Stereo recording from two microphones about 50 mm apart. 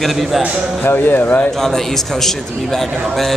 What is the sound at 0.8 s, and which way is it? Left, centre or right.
Speech, left.